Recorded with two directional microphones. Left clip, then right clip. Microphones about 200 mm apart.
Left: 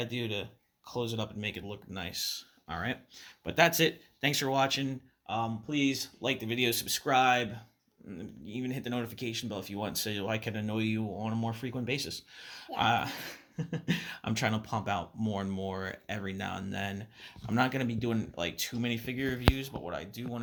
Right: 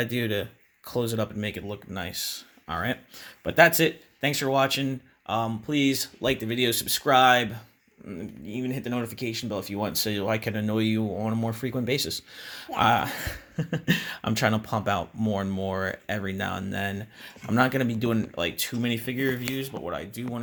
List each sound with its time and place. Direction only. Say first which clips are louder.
0.0 s speech: right 8 dB; 50° right (ahead or behind); by 4.9 s 25° right (ahead or behind)
5.2 s speech: right 6 dB; 40° right (ahead or behind)